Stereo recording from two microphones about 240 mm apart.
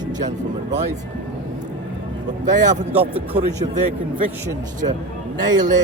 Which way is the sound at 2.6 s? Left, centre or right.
Right.